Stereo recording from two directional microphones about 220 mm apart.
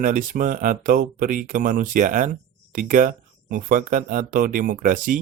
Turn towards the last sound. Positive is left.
turn(degrees=-40)  # may be behind; listen again after turning